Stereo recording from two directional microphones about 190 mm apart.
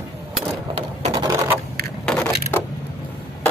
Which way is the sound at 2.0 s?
5° left (ahead or behind).